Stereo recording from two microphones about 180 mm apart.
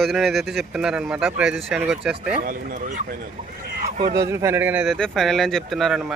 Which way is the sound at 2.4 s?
50° right (ahead or behind).